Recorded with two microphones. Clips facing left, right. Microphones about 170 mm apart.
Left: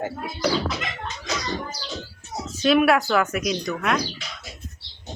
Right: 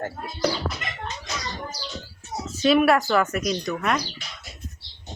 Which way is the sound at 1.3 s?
90° left.